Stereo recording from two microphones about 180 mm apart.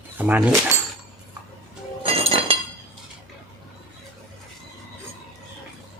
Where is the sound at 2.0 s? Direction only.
30° right (ahead or behind).